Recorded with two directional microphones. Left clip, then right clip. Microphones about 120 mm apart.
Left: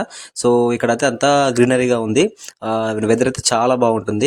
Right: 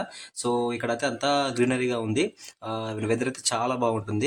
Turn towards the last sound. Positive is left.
turn(degrees=55)  # may be behind; listen again after turning